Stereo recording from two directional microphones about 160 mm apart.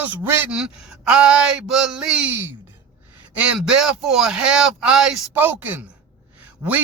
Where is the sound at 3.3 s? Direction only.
5° right (ahead or behind).